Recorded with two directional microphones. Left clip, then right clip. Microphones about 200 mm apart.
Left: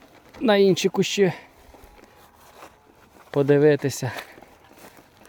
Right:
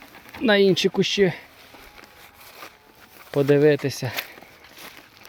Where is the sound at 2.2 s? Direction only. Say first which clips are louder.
Right 4 dB; 15° right (ahead or behind).